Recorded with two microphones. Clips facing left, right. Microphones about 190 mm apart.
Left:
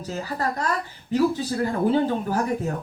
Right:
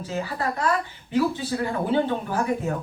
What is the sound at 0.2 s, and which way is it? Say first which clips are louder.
A woman's voice: right 1 dB; 40° left (ahead or behind).